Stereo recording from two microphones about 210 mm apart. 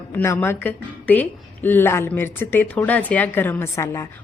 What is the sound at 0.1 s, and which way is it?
A woman's voice, 10° left (ahead or behind).